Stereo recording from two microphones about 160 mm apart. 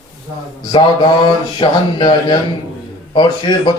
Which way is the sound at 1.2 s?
30° left (ahead or behind).